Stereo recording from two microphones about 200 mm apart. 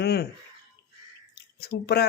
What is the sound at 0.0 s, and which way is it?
Speech, 55° left (ahead or behind).